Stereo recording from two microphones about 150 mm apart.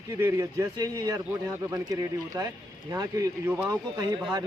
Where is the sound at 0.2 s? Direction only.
20° right (ahead or behind).